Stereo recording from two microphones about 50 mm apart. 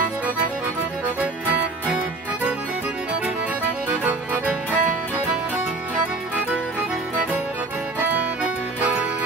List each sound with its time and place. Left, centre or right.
4.0 s music: right